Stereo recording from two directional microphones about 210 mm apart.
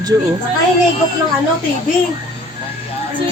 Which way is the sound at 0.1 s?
15° right (ahead or behind).